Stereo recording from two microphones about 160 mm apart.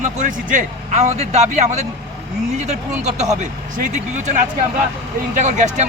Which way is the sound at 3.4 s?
50° right (ahead or behind).